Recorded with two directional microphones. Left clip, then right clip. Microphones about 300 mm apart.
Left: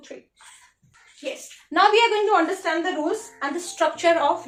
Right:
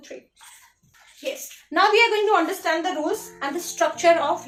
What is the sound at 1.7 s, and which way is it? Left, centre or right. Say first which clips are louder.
A woman's voice: even; centre.